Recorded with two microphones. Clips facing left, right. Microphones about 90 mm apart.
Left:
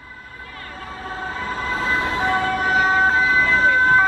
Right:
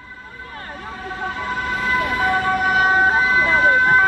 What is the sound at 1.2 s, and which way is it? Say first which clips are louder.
Emergency vehicle: right 2 dB; 35° left (ahead or behind).